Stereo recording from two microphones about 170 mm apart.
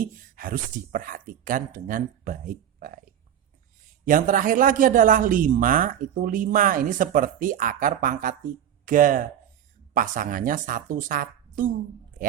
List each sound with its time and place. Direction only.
0.0 s speech: 55° right (ahead or behind)
4.0 s a man's voice: 50° right (ahead or behind)